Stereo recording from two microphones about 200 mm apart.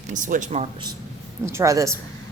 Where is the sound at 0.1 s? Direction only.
40° right (ahead or behind).